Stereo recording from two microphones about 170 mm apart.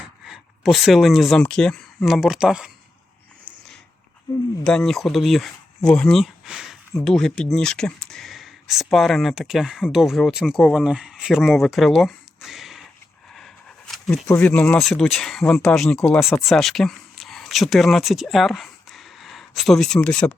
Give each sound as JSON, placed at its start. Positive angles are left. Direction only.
{"t": 0.3, "sound": "speech", "side_deg": 0}
{"t": 3.5, "sound": "a sound", "side_deg": -5}
{"t": 4.3, "sound": "speech", "side_deg": 20}
{"t": 4.6, "sound": "speech", "side_deg": 5}
{"t": 13.3, "sound": "a sound", "side_deg": 0}
{"t": 14.3, "sound": "speech", "side_deg": 10}